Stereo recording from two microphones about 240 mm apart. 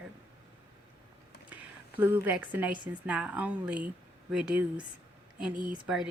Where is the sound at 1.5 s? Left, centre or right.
Centre.